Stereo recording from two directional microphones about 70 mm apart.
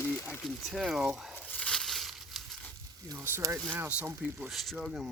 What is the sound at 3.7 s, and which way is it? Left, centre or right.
Speech, right.